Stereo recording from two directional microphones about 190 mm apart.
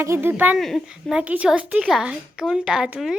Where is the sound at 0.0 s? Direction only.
15° right (ahead or behind).